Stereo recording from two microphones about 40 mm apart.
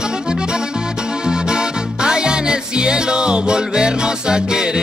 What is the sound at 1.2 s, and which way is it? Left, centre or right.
Music, centre.